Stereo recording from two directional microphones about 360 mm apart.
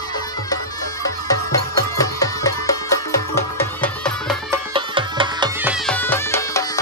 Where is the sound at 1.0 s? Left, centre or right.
Centre.